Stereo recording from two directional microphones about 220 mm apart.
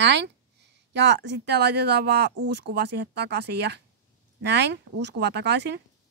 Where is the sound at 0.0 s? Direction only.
50° right (ahead or behind).